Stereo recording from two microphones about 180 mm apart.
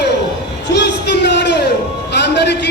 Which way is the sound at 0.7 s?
70° left (ahead or behind).